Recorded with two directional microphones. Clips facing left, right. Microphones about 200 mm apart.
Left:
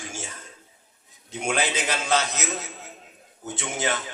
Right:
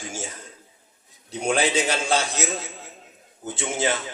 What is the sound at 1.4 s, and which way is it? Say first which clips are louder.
Speech: right 4 dB; 30° right (ahead or behind).